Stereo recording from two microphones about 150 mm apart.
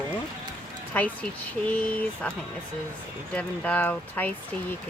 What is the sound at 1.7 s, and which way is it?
Speech, 10° left (ahead or behind).